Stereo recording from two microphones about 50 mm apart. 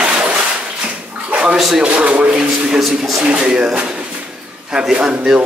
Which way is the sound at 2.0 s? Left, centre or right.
Right.